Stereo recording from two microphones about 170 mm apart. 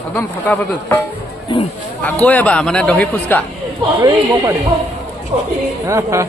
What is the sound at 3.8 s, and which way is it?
Speech, 25° right (ahead or behind).